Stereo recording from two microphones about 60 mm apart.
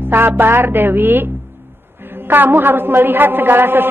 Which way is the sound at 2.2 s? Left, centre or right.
Right.